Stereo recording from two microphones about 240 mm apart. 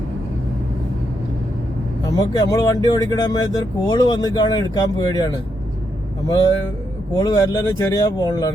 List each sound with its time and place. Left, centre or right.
2.0 s speech: centre